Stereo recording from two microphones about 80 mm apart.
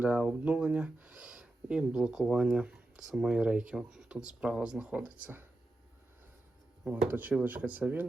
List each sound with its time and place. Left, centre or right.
0.0 s speech: centre
6.8 s speech: right